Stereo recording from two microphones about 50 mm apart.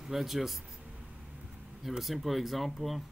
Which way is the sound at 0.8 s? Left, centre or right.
Right.